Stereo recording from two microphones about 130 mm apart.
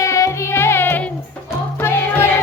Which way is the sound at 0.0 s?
25° left (ahead or behind).